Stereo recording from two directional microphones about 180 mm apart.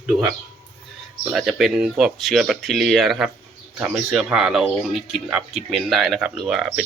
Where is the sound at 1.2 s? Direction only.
5° right (ahead or behind).